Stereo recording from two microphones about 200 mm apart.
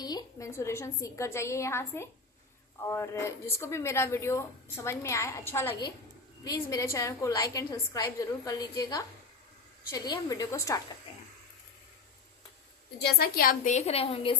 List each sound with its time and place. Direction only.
0.0 s a woman's voice: 20° left (ahead or behind)
13.0 s a woman's voice: 50° left (ahead or behind); by 14.3 s 30° left (ahead or behind)